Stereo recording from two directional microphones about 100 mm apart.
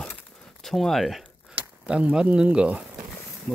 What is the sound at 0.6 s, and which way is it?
Speech, 5° left (ahead or behind).